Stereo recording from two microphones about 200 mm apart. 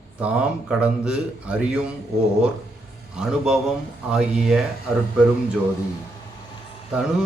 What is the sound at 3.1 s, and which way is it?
A man's voice, 5° right (ahead or behind).